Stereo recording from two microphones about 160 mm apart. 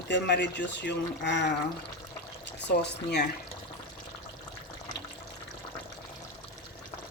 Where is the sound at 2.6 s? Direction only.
90° left.